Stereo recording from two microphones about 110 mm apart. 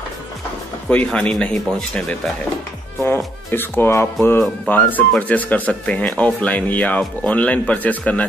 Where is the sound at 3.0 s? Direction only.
20° left (ahead or behind).